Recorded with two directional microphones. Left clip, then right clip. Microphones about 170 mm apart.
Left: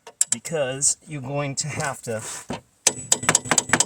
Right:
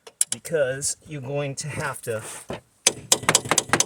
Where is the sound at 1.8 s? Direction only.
40° right (ahead or behind).